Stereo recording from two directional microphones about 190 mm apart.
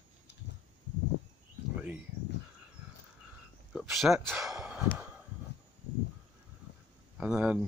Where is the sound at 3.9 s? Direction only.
Centre (ahead or behind).